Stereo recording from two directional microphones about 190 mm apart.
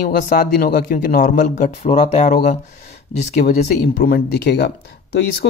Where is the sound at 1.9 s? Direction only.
30° left (ahead or behind).